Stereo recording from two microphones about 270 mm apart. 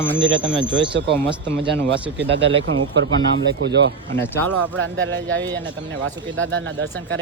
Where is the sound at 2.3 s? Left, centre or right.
Right.